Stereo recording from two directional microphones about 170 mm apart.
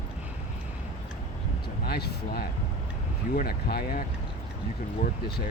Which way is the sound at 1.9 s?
70° left (ahead or behind).